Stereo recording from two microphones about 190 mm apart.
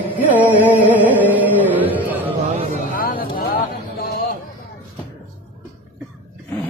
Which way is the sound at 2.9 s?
50° left (ahead or behind).